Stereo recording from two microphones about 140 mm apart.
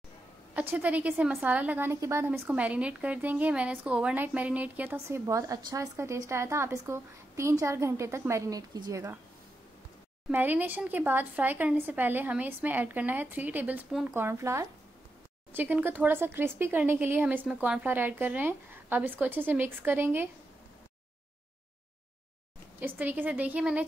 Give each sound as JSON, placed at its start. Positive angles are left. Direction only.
{"t": 0.6, "sound": "a woman's voice", "side_deg": -10}
{"t": 10.3, "sound": "a woman's voice", "side_deg": -15}
{"t": 22.8, "sound": "a woman's voice", "side_deg": -15}